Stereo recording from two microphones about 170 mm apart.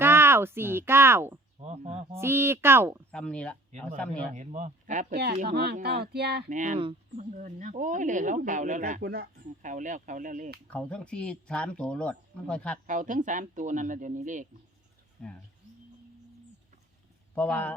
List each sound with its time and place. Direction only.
0.0 s a sound: 15° right (ahead or behind)
1.6 s speech: 40° right (ahead or behind)
2.1 s speech: 15° right (ahead or behind)
3.1 s speech: 5° left (ahead or behind)
4.3 s speech: 45° right (ahead or behind)
5.1 s speech: 65° right (ahead or behind)
6.5 s speech: 45° right (ahead or behind)
10.7 s speech: 5° left (ahead or behind)
12.9 s speech: 50° right (ahead or behind)
15.2 s speech: 5° left (ahead or behind)
17.3 s speech: 10° left (ahead or behind)